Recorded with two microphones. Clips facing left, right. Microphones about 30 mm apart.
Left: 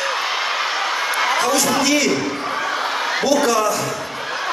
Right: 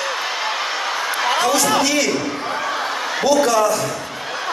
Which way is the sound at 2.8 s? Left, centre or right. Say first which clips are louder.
Left 2 dB; centre.